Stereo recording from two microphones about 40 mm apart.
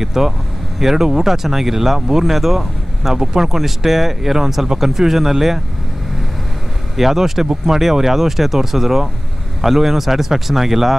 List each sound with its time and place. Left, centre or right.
0.0 s speech: centre
7.0 s speech: centre